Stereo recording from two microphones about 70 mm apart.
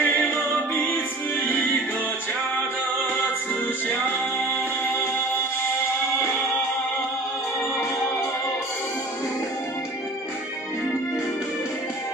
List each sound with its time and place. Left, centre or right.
0.0 s music: left
4.8 s music: left